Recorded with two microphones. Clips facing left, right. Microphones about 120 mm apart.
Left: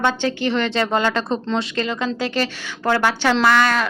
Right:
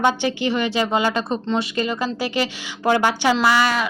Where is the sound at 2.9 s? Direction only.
15° right (ahead or behind).